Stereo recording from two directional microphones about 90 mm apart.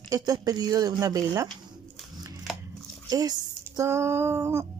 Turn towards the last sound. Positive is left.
turn(degrees=-30)  # may be behind; listen again after turning